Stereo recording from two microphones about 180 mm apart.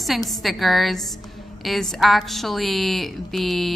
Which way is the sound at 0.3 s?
Centre (ahead or behind).